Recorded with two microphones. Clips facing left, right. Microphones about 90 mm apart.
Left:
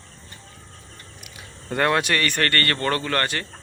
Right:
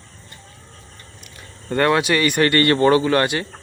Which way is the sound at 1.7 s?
Centre (ahead or behind).